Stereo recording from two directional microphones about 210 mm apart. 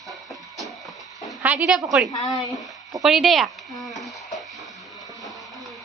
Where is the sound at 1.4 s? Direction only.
5° right (ahead or behind).